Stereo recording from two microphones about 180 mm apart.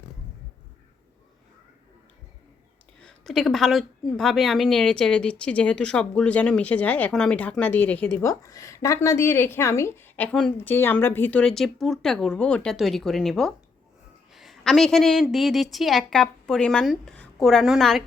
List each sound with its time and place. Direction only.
3.0 s a woman's voice: 5° left (ahead or behind)